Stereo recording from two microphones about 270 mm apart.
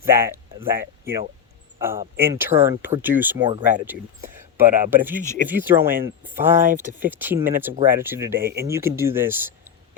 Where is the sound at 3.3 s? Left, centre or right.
Centre.